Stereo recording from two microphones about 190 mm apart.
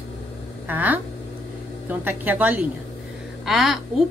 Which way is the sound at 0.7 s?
10° right (ahead or behind).